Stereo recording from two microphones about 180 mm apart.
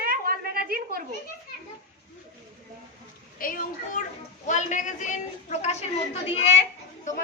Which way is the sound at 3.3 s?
50° left (ahead or behind).